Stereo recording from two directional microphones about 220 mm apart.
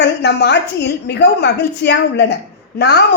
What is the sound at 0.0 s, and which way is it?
A woman's voice, 50° left (ahead or behind).